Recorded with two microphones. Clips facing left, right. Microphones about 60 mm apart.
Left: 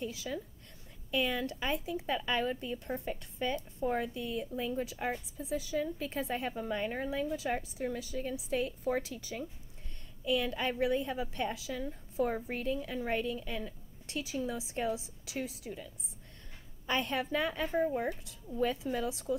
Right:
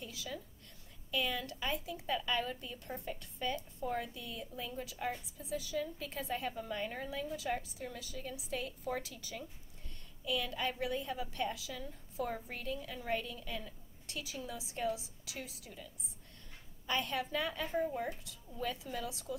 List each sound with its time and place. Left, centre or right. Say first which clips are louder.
0.1 s a woman's voice: left 5 dB; left
16.8 s a woman's voice: left 3 dB; left